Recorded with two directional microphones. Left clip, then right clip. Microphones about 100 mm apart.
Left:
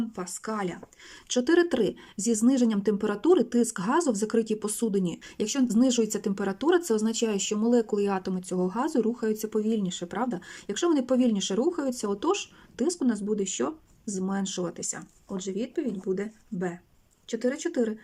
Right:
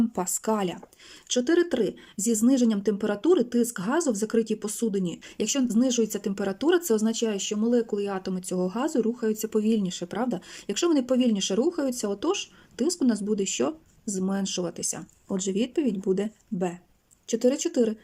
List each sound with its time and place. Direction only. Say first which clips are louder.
0.2 s speech: right 5 dB; 35° right (ahead or behind)
1.3 s speech: even; centre (ahead or behind)
10.9 s speech: even; 5° right (ahead or behind)
15.3 s speech: right 5 dB; 30° right (ahead or behind); by 17.9 s 10° right (ahead or behind)